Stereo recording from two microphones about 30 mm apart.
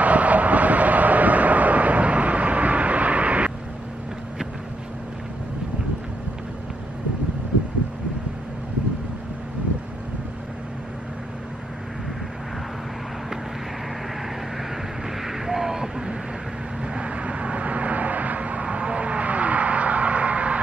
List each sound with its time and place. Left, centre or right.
0.0 s vehicle: right
15.2 s a sound: centre
16.9 s vehicle: right